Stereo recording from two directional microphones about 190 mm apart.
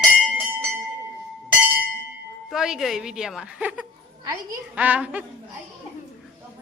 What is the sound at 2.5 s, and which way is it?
A woman's voice, centre (ahead or behind).